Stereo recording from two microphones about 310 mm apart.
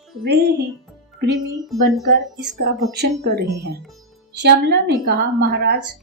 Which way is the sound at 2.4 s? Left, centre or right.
Right.